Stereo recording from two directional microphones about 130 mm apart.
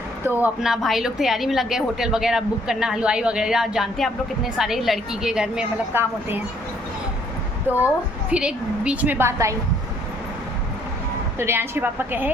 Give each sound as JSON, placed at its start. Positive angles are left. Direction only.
{"t": 0.3, "sound": "a woman's voice", "side_deg": -15}
{"t": 5.9, "sound": "a woman's voice", "side_deg": -15}
{"t": 8.3, "sound": "a woman's voice", "side_deg": -10}
{"t": 11.3, "sound": "a woman's voice", "side_deg": -20}